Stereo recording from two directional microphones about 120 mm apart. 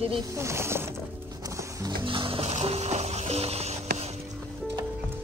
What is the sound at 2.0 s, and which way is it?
Music, 45° right (ahead or behind).